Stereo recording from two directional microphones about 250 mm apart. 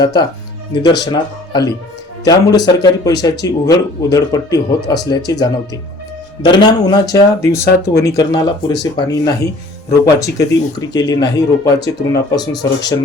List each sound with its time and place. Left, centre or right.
0.0 s speech: centre